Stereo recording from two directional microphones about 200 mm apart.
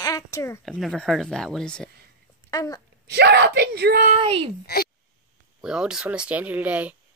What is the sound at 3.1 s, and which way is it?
Speech, 55° right (ahead or behind).